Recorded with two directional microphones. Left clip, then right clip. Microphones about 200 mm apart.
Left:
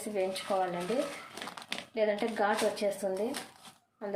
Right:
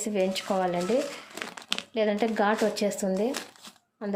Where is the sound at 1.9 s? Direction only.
50° right (ahead or behind).